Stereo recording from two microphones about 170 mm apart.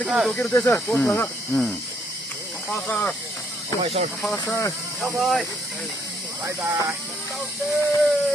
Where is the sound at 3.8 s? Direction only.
35° right (ahead or behind).